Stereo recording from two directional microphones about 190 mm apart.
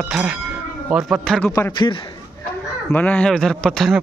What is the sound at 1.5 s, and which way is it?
Speech, 20° left (ahead or behind).